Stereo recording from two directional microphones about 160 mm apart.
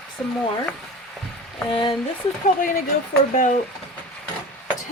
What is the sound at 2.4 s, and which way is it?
Speech, 60° left (ahead or behind).